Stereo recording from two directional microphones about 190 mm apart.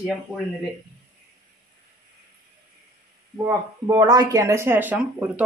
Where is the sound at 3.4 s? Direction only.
15° right (ahead or behind).